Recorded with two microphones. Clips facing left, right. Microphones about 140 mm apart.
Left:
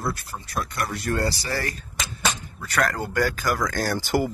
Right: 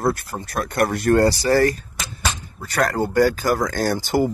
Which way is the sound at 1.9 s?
5° right (ahead or behind).